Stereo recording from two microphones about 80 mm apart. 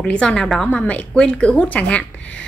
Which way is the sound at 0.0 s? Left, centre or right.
Centre.